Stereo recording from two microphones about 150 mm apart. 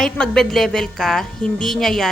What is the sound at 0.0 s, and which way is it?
Speech, 5° left (ahead or behind).